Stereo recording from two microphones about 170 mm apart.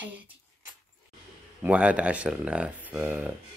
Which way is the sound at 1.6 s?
10° right (ahead or behind).